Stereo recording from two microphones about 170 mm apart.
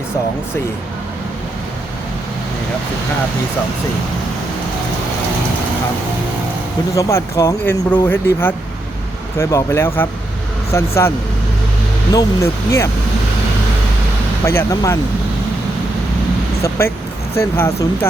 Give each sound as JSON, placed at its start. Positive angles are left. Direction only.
{"t": 6.9, "sound": "speech", "side_deg": 15}
{"t": 12.1, "sound": "speech", "side_deg": 15}
{"t": 14.4, "sound": "speech", "side_deg": 15}
{"t": 16.6, "sound": "speech", "side_deg": 15}